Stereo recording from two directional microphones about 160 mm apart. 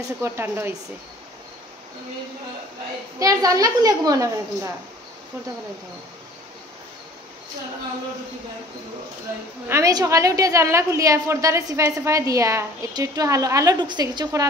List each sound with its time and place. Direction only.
0.2 s speech: 15° right (ahead or behind)
3.2 s a woman's voice: 20° right (ahead or behind)
9.7 s a woman's voice: 20° right (ahead or behind)